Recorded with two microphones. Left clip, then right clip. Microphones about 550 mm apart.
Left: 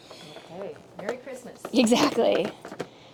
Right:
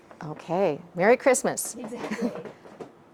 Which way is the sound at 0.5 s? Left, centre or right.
Right.